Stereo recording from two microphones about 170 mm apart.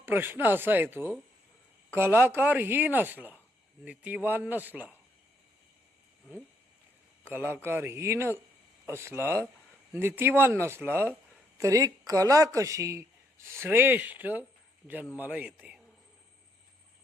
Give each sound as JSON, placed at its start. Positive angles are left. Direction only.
{"t": 0.0, "sound": "speech", "side_deg": -10}
{"t": 7.3, "sound": "speech", "side_deg": -15}